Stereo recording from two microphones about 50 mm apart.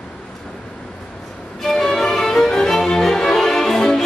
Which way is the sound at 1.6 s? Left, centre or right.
Centre.